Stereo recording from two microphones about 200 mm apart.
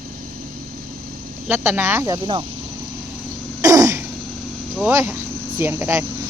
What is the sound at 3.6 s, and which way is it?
Throat clearing, 15° right (ahead or behind).